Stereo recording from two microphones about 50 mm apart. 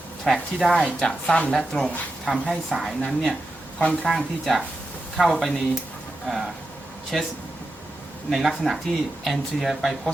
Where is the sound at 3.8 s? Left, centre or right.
Left.